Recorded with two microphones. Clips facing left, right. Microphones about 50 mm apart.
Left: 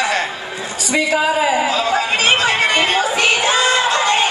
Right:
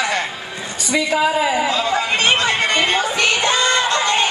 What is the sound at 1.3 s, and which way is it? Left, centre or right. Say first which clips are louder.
Speech: left 2 dB; left.